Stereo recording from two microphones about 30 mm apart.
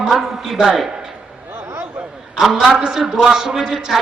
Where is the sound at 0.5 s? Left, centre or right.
Right.